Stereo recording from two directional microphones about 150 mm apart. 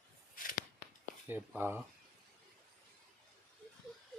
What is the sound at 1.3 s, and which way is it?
Speech, 15° right (ahead or behind).